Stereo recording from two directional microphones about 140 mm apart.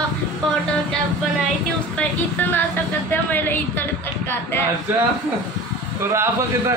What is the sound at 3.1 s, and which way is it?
Music, 15° left (ahead or behind).